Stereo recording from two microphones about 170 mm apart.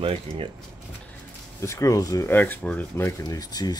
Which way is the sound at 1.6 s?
20° left (ahead or behind).